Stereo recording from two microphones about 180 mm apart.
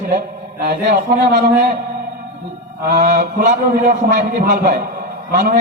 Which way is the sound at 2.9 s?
45° right (ahead or behind).